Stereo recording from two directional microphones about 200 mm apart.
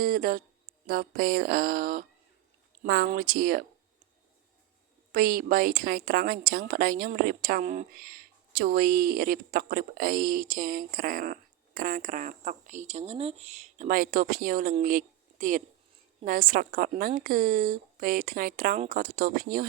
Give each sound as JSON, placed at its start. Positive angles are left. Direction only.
{"t": 0.0, "sound": "a woman's voice", "side_deg": -45}
{"t": 5.1, "sound": "a woman's voice", "side_deg": -45}